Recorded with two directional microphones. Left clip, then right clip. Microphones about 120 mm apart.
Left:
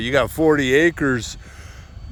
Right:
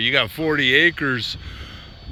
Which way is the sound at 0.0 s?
55° left (ahead or behind).